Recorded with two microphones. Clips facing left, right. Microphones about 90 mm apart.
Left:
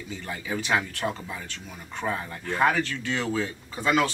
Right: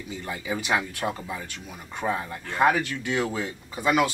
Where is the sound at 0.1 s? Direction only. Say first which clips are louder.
Right 1 dB; 15° right (ahead or behind).